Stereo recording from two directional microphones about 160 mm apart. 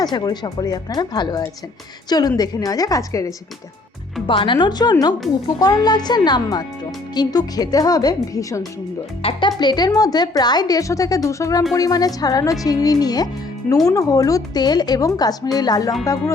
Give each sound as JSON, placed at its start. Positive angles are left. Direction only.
{"t": 0.0, "sound": "a woman's voice", "side_deg": 25}